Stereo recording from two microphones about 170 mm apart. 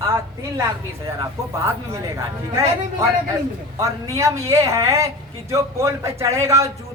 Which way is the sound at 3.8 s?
20° right (ahead or behind).